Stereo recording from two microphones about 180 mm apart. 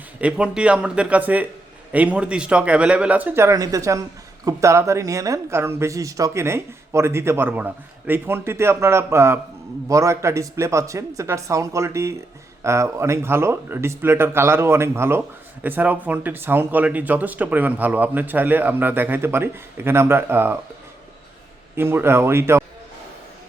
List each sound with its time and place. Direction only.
0.2 s speech: 5° right (ahead or behind)
21.8 s speech: 10° right (ahead or behind)